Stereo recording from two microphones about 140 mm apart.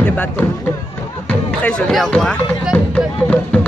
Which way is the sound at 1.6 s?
5° left (ahead or behind).